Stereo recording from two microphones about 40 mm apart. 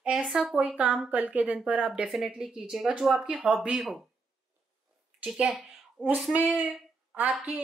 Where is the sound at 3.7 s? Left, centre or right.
Centre.